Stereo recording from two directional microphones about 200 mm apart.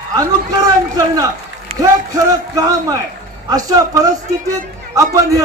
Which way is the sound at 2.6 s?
20° right (ahead or behind).